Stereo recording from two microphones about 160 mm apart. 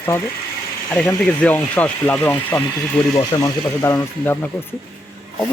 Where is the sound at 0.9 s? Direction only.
10° left (ahead or behind).